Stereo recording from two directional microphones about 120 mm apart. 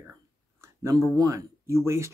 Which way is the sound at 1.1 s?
30° right (ahead or behind).